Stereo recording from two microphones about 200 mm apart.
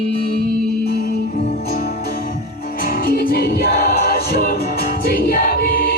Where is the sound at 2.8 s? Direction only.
45° left (ahead or behind).